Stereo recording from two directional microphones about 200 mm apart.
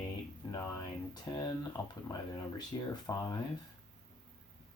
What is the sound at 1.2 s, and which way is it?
Speech, 20° left (ahead or behind).